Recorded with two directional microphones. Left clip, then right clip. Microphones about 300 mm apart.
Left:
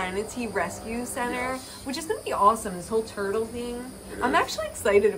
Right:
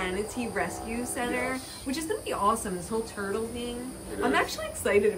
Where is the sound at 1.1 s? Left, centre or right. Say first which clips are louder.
Left 1 dB; centre.